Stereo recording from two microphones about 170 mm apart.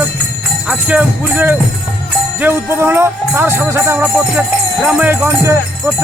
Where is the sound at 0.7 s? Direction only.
5° right (ahead or behind).